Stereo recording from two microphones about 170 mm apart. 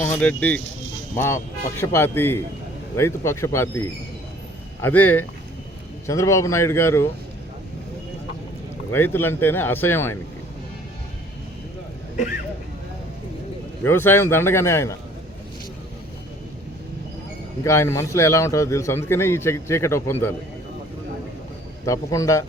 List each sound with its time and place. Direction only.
0.0 s a man's voice: 10° left (ahead or behind)
1.8 s a man's voice: 15° left (ahead or behind)
8.9 s a man's voice: 15° left (ahead or behind)
12.1 s speech: 45° left (ahead or behind)
13.8 s a man's voice: 10° left (ahead or behind)
17.6 s a man's voice: 15° left (ahead or behind)
21.8 s a man's voice: 20° left (ahead or behind)